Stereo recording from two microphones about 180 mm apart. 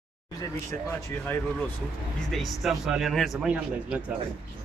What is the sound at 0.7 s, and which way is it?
Speech, 10° left (ahead or behind).